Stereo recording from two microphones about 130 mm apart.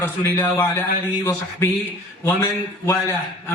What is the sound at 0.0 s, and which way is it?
A man's voice, 20° left (ahead or behind).